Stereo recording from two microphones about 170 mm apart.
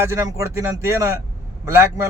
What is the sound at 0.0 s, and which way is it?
A man's voice, 20° right (ahead or behind).